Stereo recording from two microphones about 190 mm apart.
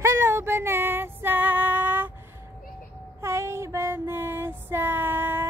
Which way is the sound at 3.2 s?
15° right (ahead or behind).